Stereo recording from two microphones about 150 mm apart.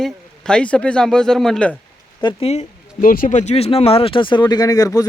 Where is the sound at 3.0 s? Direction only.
65° left (ahead or behind).